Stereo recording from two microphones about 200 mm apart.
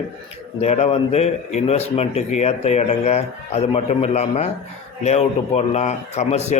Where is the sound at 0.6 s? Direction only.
35° left (ahead or behind).